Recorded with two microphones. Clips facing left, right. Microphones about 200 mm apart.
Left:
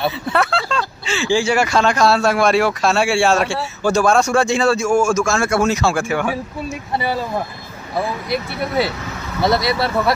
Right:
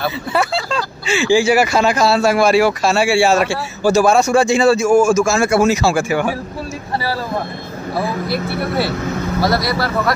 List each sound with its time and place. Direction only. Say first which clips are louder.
0.3 s speech: right 2 dB; centre (ahead or behind)
8.3 s speech: right 2 dB; 15° left (ahead or behind)